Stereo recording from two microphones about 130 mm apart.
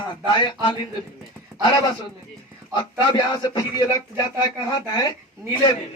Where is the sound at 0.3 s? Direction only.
40° left (ahead or behind).